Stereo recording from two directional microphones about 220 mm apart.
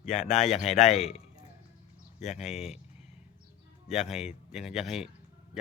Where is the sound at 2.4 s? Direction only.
Centre (ahead or behind).